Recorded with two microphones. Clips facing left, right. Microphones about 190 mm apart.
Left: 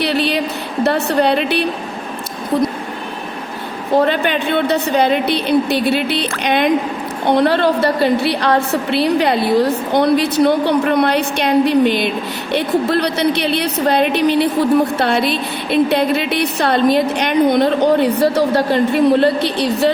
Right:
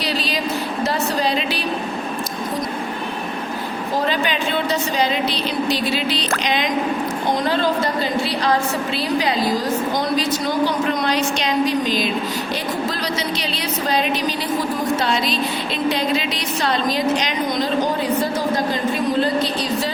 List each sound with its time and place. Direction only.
0.0 s a sound: 60° left (ahead or behind)
0.9 s a woman's voice: 65° left (ahead or behind)
3.9 s a woman's voice: 60° left (ahead or behind)